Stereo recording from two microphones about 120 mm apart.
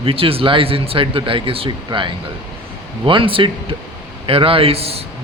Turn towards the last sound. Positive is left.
turn(degrees=-55)  # may be behind; listen again after turning